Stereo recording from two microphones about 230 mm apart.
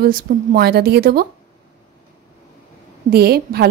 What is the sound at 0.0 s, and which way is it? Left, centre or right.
A woman's voice, right.